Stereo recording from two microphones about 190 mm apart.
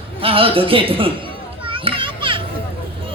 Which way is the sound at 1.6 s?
30° right (ahead or behind).